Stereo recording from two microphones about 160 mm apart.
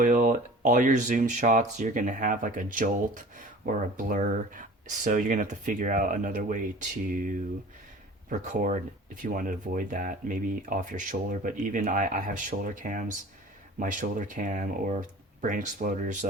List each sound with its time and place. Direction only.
0.0 s speech: 55° right (ahead or behind)